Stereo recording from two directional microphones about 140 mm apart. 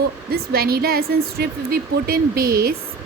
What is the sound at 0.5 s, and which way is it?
A woman's voice, 90° right.